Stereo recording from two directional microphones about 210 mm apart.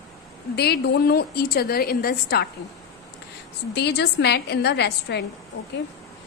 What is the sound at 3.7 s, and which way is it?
A woman's voice, 55° left (ahead or behind).